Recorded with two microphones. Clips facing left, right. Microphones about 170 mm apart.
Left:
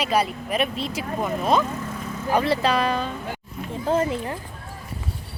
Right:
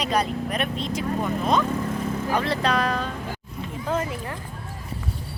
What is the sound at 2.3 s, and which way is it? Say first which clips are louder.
Speech: left 4 dB; 5° left (ahead or behind).